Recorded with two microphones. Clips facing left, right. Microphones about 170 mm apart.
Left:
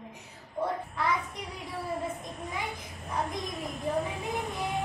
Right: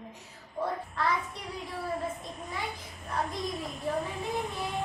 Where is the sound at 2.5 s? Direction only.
20° left (ahead or behind).